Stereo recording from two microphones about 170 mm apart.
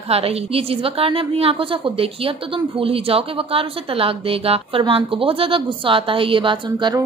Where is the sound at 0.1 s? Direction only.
35° right (ahead or behind).